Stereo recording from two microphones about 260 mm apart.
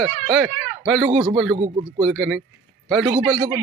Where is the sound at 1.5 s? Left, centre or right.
Centre.